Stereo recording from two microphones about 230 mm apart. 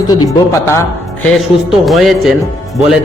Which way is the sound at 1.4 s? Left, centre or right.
Centre.